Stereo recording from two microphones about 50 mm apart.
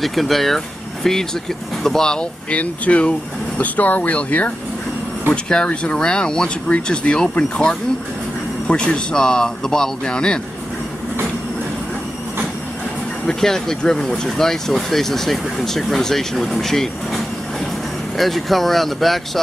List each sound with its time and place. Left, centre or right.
0.0 s speech: centre
2.5 s speech: left
5.3 s speech: centre
13.3 s speech: centre